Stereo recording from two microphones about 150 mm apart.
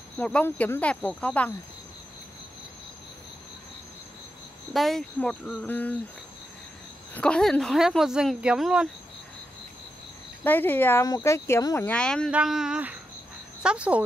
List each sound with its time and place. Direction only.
0.2 s speech: 10° left (ahead or behind)
4.7 s speech: centre (ahead or behind)
7.2 s speech: 5° left (ahead or behind)
10.4 s speech: 15° left (ahead or behind)
12.3 s speech: 5° right (ahead or behind)